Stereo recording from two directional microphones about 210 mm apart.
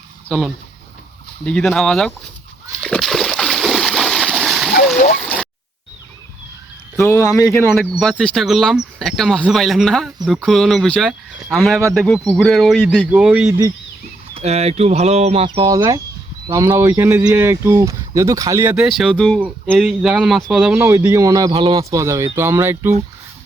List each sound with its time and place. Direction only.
0.3 s speech: centre (ahead or behind)
2.8 s splash: centre (ahead or behind)
5.1 s a sound: 5° left (ahead or behind)
6.9 s speech: 15° left (ahead or behind)
7.8 s speech: centre (ahead or behind)
13.5 s speech: 15° right (ahead or behind)
14.3 s speech: 30° right (ahead or behind); by 22.9 s 10° right (ahead or behind)